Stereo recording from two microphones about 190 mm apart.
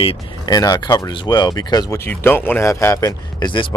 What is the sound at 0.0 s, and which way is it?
Speech, 25° left (ahead or behind).